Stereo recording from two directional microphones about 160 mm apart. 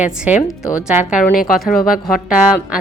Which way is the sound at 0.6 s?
20° left (ahead or behind).